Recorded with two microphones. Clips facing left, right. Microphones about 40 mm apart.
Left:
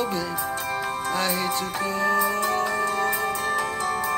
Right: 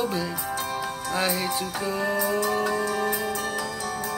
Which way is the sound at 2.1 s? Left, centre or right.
Left.